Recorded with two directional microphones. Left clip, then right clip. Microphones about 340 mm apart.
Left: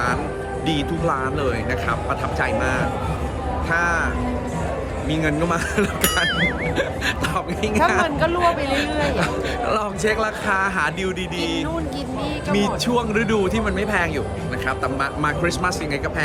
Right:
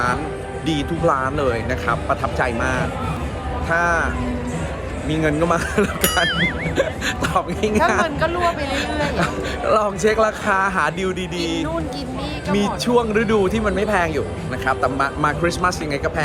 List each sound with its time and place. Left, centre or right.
0.7 s speech: centre
5.1 s speech: centre
8.0 s speech: centre
8.4 s speech: centre